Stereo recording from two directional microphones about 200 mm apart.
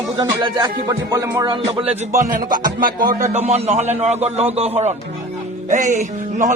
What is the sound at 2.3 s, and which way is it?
Music, 45° right (ahead or behind).